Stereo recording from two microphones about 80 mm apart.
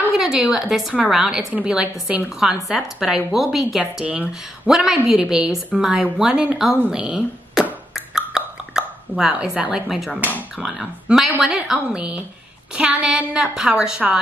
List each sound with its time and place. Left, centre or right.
0.1 s a woman's voice: centre
3.8 s a woman's voice: centre
6.9 s beatboxing: centre
9.3 s a woman's voice: centre
9.8 s a woman's voice: centre